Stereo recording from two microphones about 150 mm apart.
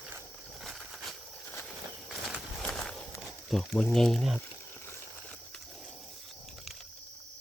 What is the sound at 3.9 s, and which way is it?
Speech, centre (ahead or behind).